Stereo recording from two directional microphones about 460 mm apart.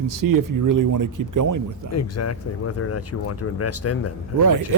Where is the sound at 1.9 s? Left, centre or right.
Left.